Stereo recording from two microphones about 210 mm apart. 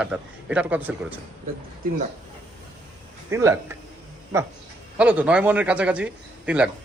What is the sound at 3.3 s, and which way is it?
Speech, 15° right (ahead or behind).